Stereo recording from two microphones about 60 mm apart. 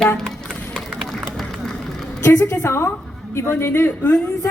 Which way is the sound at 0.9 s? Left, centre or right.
Centre.